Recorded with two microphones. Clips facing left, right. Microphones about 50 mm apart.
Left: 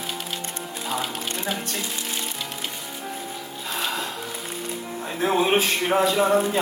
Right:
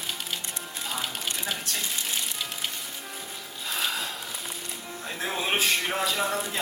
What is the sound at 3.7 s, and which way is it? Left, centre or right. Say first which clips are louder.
Music: left 3 dB; centre.